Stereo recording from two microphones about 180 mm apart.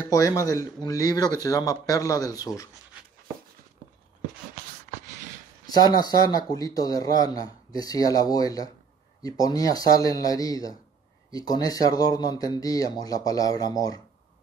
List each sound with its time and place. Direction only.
0.1 s speech: 20° left (ahead or behind)
5.7 s speech: 20° left (ahead or behind)